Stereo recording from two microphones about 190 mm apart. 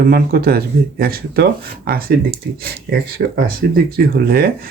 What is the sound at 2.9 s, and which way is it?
Speech, 55° right (ahead or behind).